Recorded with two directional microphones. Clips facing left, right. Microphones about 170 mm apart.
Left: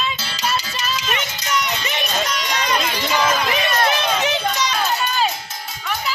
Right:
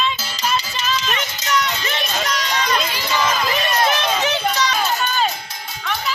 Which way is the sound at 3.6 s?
15° left (ahead or behind).